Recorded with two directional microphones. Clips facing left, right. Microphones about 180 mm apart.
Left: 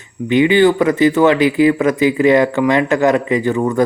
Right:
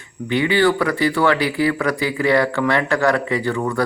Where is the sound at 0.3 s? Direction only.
20° left (ahead or behind).